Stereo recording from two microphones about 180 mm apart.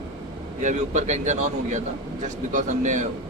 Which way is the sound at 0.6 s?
40° right (ahead or behind).